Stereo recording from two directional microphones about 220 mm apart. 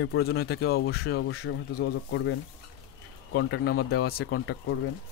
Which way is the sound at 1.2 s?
60° left (ahead or behind).